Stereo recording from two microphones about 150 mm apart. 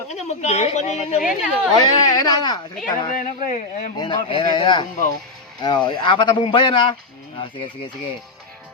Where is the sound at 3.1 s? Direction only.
55° left (ahead or behind).